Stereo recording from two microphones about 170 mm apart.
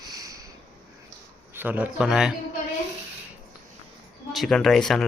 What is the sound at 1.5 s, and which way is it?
Speech, 10° right (ahead or behind).